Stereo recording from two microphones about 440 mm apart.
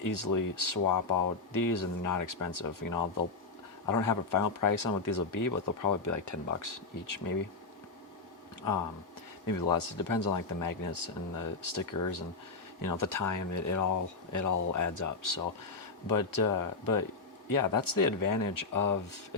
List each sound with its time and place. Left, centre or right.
0.0 s speech: left
9.5 s speech: left